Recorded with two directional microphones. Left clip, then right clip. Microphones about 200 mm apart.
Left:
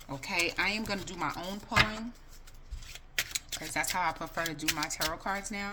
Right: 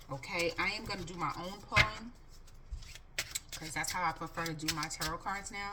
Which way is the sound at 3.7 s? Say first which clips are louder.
Left 4 dB; 50° left (ahead or behind).